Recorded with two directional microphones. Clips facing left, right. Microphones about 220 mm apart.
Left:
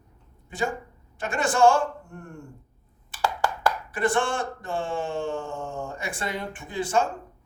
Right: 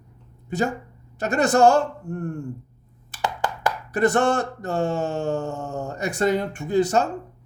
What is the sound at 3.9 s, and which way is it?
A man's voice, 40° right (ahead or behind).